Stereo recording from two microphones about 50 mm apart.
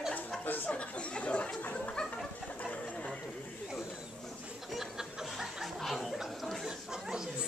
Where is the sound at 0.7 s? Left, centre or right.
Left.